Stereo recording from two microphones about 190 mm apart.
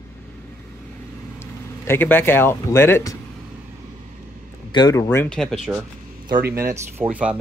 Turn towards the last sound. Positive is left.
turn(degrees=-5)  # may be behind; listen again after turning